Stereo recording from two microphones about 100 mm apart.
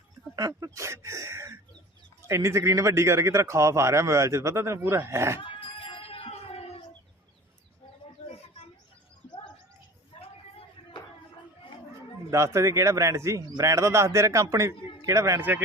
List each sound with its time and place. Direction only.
0.3 s a man's voice: 35° right (ahead or behind)
5.4 s a sound: 60° left (ahead or behind); by 6.8 s 85° left
12.3 s speech: 30° right (ahead or behind)
15.4 s speech: 20° right (ahead or behind)